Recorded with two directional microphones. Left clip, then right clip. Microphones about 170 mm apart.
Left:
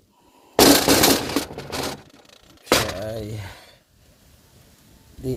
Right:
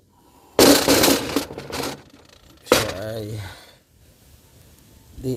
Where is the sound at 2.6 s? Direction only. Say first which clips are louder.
Right 1 dB; 5° left (ahead or behind).